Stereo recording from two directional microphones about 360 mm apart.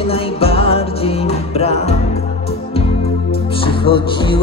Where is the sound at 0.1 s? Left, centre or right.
Centre.